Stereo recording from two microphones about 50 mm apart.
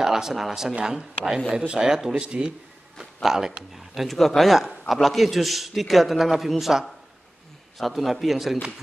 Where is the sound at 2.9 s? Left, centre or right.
Centre.